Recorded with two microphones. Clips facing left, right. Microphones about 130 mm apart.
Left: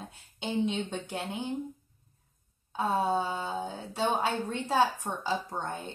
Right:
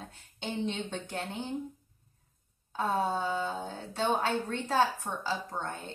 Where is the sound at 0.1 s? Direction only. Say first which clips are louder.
Left 5 dB; 10° left (ahead or behind).